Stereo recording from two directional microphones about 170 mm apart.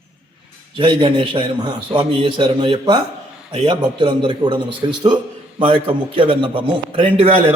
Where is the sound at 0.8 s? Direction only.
30° right (ahead or behind).